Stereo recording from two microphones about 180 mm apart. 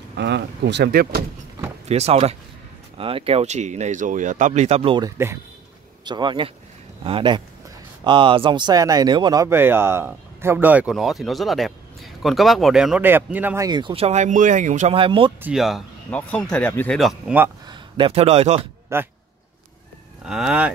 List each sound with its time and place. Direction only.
0.1 s speech: 70° right (ahead or behind)
1.9 s speech: 35° right (ahead or behind)
5.1 s speech: 15° right (ahead or behind)
6.0 s speech: 25° right (ahead or behind)
13.7 s speech: 25° right (ahead or behind); by 15.0 s 45° right (ahead or behind)
15.0 s speech: 30° right (ahead or behind)
15.4 s speech: centre (ahead or behind)
17.6 s speech: 25° right (ahead or behind)
18.9 s speech: 15° right (ahead or behind)
20.2 s speech: 5° right (ahead or behind)